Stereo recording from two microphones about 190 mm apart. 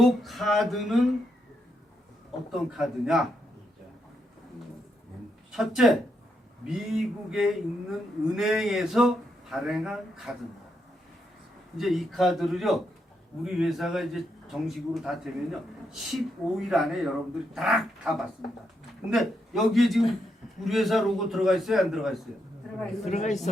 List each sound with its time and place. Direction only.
0.0 s a man's voice: centre (ahead or behind)
2.5 s a man's voice: centre (ahead or behind)
5.5 s a man's voice: centre (ahead or behind)
11.8 s a man's voice: centre (ahead or behind)
19.1 s a man's voice: centre (ahead or behind)
23.0 s a man's voice: 35° left (ahead or behind)